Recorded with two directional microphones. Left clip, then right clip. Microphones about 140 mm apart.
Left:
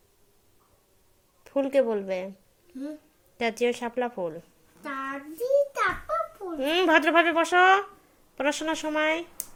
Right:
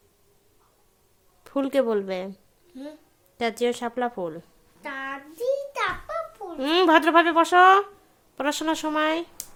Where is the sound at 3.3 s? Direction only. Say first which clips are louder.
Right 1 dB; 15° right (ahead or behind).